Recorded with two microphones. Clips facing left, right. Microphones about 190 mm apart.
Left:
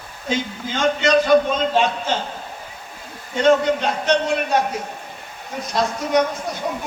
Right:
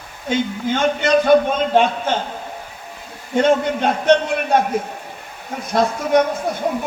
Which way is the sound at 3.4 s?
55° right (ahead or behind).